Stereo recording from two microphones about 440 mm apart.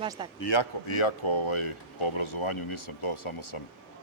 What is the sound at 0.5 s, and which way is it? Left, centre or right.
Speech, left.